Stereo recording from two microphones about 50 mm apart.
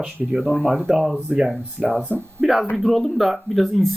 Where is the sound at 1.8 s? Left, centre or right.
Right.